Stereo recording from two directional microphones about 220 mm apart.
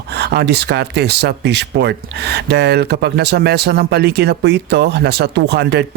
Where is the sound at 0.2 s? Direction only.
45° right (ahead or behind).